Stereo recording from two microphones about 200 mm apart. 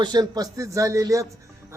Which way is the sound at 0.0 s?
20° right (ahead or behind).